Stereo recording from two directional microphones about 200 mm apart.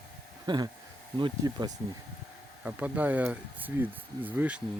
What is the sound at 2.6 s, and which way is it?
Speech, 5° right (ahead or behind).